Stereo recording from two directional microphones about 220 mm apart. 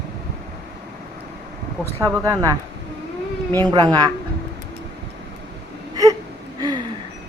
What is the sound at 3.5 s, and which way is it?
Speech, 10° left (ahead or behind).